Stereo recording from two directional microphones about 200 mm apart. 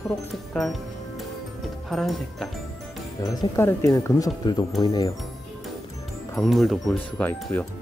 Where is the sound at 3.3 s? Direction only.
15° left (ahead or behind).